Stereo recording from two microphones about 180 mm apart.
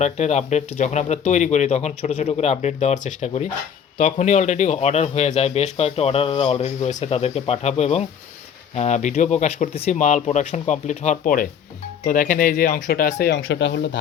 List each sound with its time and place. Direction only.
0.0 s a man's voice: 40° left (ahead or behind); by 14.0 s 75° left (ahead or behind)